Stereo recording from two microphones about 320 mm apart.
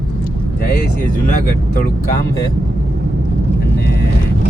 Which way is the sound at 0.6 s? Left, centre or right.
Left.